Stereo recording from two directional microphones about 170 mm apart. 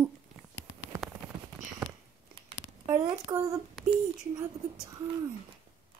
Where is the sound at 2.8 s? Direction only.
15° right (ahead or behind).